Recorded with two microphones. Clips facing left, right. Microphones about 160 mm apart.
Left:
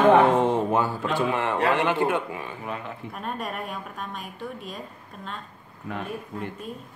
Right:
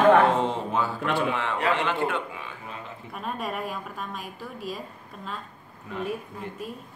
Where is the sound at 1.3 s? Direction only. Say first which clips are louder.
Left 3 dB; 55° left (ahead or behind).